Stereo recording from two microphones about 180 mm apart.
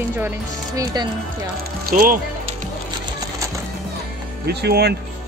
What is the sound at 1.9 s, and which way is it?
Speech, 50° right (ahead or behind).